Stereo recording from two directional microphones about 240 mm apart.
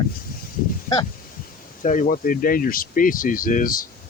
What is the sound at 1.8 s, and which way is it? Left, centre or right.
Speech, left.